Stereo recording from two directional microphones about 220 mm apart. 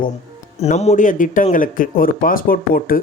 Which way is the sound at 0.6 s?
30° left (ahead or behind).